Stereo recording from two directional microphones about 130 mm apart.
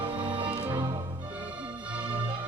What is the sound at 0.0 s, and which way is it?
Music, 40° right (ahead or behind).